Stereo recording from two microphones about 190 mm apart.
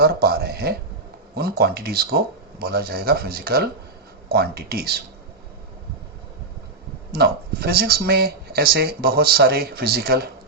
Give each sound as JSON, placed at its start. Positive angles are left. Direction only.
{"t": 0.0, "sound": "speech", "side_deg": -55}
{"t": 7.1, "sound": "speech", "side_deg": -55}